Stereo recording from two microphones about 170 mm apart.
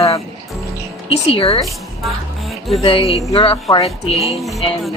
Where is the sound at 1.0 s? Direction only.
35° left (ahead or behind).